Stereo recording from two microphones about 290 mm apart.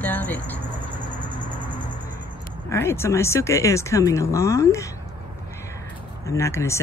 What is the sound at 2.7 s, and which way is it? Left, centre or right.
Speech, centre.